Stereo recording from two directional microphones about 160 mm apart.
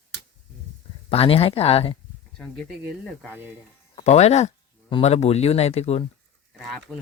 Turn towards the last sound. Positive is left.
turn(degrees=0)  # may be behind; listen again after turning